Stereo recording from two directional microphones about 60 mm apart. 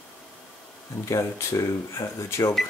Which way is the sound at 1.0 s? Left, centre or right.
Left.